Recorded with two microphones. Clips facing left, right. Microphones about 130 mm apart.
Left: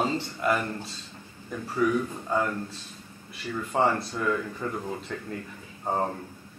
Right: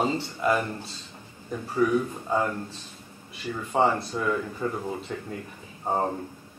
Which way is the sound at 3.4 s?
15° right (ahead or behind).